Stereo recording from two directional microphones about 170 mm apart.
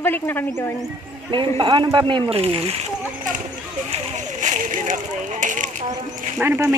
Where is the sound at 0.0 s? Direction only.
10° left (ahead or behind).